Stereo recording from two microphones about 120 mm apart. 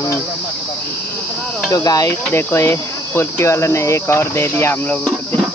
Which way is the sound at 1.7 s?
30° left (ahead or behind).